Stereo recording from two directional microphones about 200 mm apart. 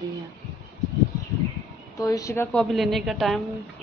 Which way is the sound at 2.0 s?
15° left (ahead or behind).